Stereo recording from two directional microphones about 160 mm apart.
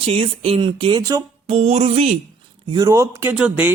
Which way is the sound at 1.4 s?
40° right (ahead or behind).